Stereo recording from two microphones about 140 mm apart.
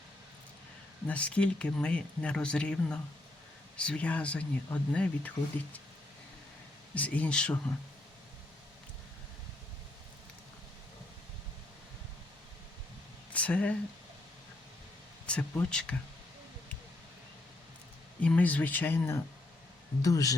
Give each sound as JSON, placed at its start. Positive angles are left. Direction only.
{"t": 1.0, "sound": "speech", "side_deg": 10}
{"t": 6.9, "sound": "speech", "side_deg": 10}
{"t": 13.3, "sound": "speech", "side_deg": 10}
{"t": 15.3, "sound": "speech", "side_deg": 5}
{"t": 18.2, "sound": "speech", "side_deg": 10}